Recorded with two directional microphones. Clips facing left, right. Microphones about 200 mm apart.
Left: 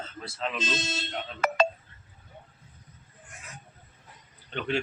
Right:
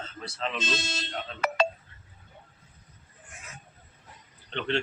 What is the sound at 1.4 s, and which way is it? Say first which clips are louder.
Telephone dialing: left 2 dB; 50° left (ahead or behind).